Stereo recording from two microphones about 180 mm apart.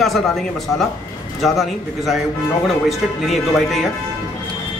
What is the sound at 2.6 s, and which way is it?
A man's voice, centre (ahead or behind).